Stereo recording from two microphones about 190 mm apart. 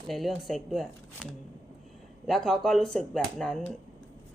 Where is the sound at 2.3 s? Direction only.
Centre (ahead or behind).